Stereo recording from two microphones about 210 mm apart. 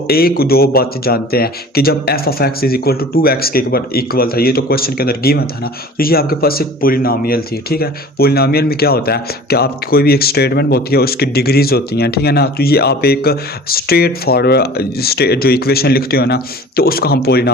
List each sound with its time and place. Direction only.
0.1 s speech: 45° left (ahead or behind)